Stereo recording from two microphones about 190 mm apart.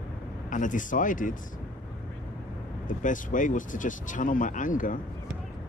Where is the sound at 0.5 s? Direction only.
45° left (ahead or behind).